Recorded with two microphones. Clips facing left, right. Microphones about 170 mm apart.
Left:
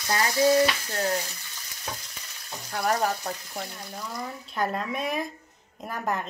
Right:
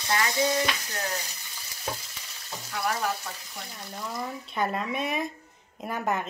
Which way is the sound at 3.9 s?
Centre (ahead or behind).